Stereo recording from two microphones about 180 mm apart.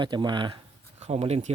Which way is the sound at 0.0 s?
25° right (ahead or behind).